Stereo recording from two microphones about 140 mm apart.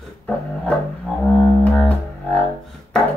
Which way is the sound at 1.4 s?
10° left (ahead or behind).